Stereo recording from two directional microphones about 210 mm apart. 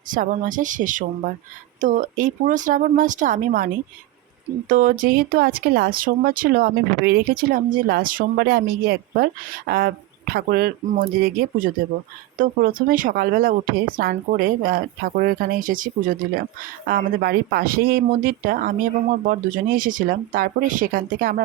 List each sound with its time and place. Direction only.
0.1 s speech: 40° right (ahead or behind)
4.7 s speech: 40° right (ahead or behind)